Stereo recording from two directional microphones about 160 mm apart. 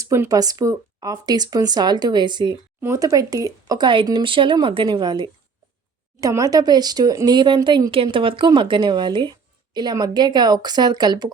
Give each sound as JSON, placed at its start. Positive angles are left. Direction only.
{"t": 0.0, "sound": "speech", "side_deg": -20}